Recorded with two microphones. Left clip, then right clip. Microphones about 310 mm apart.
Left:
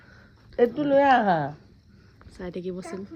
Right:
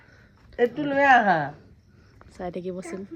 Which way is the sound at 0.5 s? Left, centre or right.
Left.